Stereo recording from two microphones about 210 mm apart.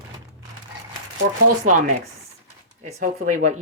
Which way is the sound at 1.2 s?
45° right (ahead or behind).